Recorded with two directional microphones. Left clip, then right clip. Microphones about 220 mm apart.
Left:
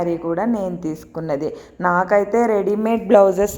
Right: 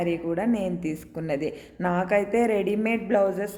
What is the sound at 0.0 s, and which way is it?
A woman's voice, 10° right (ahead or behind).